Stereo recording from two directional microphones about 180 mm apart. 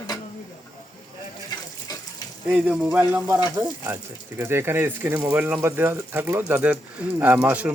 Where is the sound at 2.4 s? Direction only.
5° right (ahead or behind).